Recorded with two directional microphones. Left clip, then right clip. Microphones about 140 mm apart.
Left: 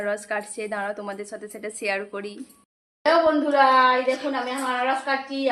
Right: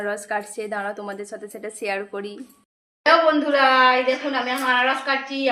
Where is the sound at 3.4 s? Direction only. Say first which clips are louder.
Right 1 dB; 10° left (ahead or behind).